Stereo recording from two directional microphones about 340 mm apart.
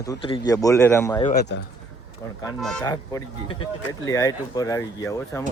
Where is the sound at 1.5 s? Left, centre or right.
Left.